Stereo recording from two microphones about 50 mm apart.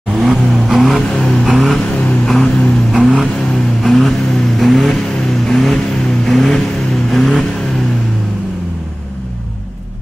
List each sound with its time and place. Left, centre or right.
0.1 s vehicle: centre
2.9 s vehicle: centre